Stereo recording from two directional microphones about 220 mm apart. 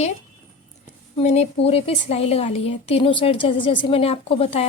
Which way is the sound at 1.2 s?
30° left (ahead or behind).